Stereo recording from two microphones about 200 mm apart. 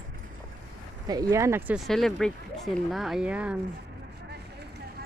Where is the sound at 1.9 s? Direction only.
Centre (ahead or behind).